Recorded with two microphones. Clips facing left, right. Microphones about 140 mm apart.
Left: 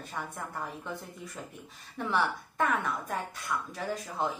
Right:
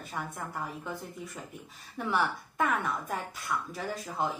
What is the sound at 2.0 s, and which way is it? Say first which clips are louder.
A woman's voice: even; 5° right (ahead or behind).